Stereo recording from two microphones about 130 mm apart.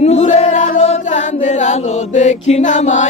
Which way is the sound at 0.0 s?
60° left (ahead or behind).